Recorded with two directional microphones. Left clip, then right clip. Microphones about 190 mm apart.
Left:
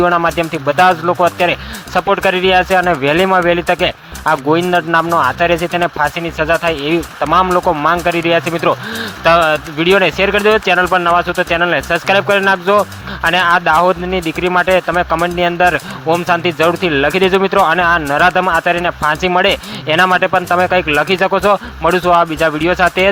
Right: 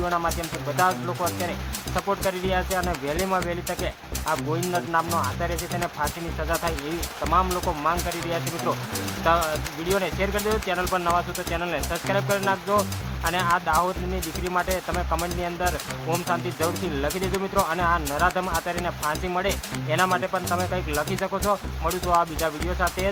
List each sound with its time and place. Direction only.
0.0 s speech: 35° left (ahead or behind)